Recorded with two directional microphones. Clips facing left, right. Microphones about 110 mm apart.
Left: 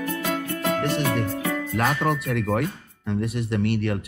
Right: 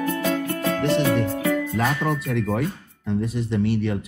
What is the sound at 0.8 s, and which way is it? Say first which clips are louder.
Speech: right 6 dB; 50° left (ahead or behind).